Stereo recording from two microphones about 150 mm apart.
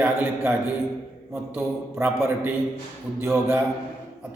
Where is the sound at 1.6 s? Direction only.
15° right (ahead or behind).